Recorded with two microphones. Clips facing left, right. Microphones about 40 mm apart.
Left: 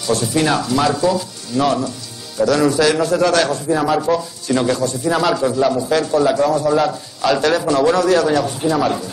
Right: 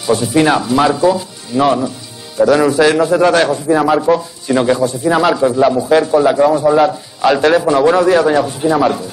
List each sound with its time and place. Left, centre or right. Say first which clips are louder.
0.0 s a man's voice: right 5 dB; centre